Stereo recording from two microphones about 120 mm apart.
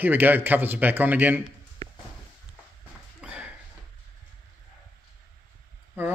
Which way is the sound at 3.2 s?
10° right (ahead or behind).